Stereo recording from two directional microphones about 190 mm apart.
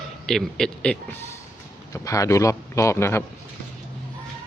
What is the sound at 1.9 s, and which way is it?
A man's voice, 15° left (ahead or behind).